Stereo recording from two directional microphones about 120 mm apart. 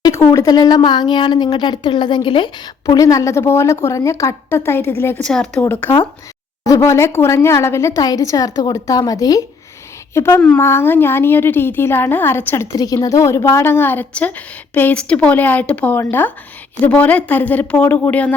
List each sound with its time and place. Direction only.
0.0 s speech: 30° left (ahead or behind)
2.8 s a woman's voice: 25° left (ahead or behind)
5.2 s a woman's voice: 5° left (ahead or behind)
5.8 s a woman's voice: 20° left (ahead or behind)
10.2 s a woman's voice: 20° left (ahead or behind)
12.7 s a woman's voice: 30° left (ahead or behind); by 18.3 s 15° left (ahead or behind)